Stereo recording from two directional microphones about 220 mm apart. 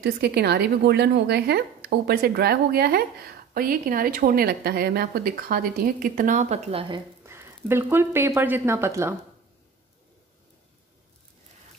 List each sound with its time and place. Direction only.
0.0 s speech: 45° right (ahead or behind); by 7.0 s 25° right (ahead or behind)
7.2 s speech: 10° right (ahead or behind)